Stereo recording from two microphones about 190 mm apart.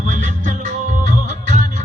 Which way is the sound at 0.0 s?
40° right (ahead or behind).